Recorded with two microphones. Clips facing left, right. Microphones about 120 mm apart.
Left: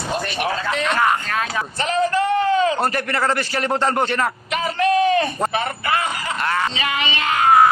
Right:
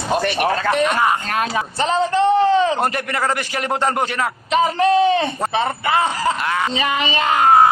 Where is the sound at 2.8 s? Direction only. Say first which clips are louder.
Even; 15° right (ahead or behind).